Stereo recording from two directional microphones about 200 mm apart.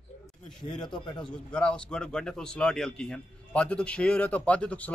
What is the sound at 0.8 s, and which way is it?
A man's voice, 5° left (ahead or behind).